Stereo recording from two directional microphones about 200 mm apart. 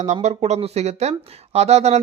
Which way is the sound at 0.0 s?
35° right (ahead or behind).